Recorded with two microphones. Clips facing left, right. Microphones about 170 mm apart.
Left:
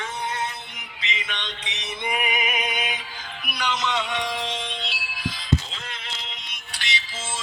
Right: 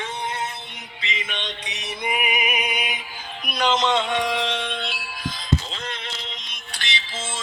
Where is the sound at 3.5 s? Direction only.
50° right (ahead or behind).